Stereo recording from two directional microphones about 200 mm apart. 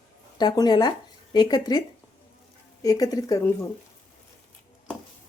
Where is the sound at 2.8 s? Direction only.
20° left (ahead or behind).